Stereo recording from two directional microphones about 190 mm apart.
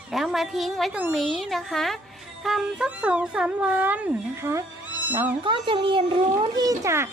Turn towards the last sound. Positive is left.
turn(degrees=-15)  # may be behind; listen again after turning